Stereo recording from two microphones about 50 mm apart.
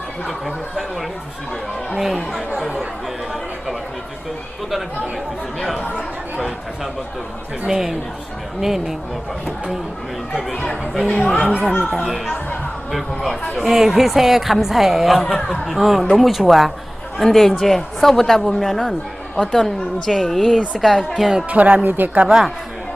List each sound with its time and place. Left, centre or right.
0.3 s a woman's voice: centre
2.0 s a woman's voice: centre
5.5 s a woman's voice: centre
7.7 s a child's voice: centre
10.5 s speech: centre
11.4 s a child's voice: centre
11.9 s a woman's voice: centre
15.3 s speech: centre
15.7 s a woman's voice: centre
21.5 s speech: right
22.2 s a child's voice: centre